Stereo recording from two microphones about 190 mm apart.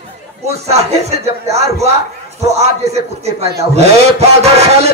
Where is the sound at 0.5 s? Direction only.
35° right (ahead or behind).